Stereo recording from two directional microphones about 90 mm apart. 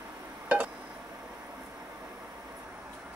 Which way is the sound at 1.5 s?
25° right (ahead or behind).